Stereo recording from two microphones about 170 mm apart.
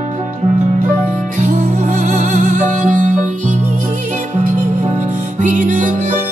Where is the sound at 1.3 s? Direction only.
50° right (ahead or behind).